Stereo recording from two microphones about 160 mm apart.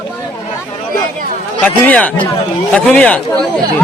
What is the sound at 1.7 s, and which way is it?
A man's voice, 10° left (ahead or behind).